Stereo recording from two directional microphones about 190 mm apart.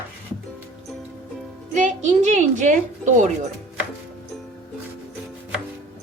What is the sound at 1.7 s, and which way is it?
A woman's voice, 40° right (ahead or behind).